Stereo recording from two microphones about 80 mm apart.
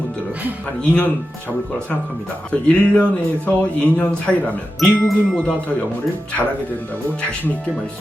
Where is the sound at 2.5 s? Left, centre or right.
Centre.